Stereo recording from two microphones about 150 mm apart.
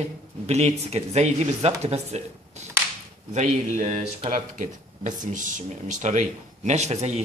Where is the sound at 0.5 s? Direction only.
45° right (ahead or behind).